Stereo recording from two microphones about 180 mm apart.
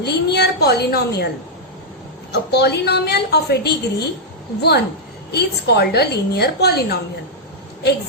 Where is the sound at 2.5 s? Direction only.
65° left (ahead or behind).